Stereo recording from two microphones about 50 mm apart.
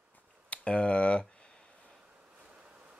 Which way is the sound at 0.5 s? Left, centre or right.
Left.